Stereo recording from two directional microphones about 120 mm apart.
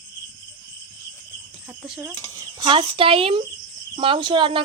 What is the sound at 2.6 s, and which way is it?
Speech, 45° right (ahead or behind).